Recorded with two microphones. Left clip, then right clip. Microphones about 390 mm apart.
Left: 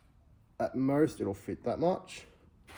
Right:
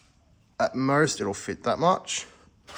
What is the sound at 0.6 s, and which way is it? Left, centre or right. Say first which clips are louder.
Speech: right 6 dB; right.